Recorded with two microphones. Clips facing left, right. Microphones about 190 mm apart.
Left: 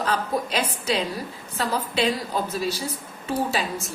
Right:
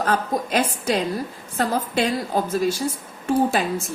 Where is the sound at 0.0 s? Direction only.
50° right (ahead or behind).